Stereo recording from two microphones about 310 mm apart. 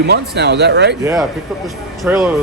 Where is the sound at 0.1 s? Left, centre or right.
Right.